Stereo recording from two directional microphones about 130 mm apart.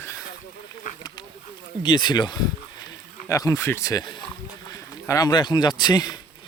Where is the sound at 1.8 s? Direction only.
35° left (ahead or behind).